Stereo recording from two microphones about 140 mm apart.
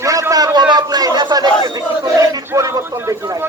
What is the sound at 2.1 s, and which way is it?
Chant, 25° right (ahead or behind).